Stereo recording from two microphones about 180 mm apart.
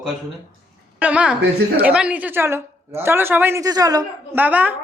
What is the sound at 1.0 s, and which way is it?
Speech, 5° right (ahead or behind).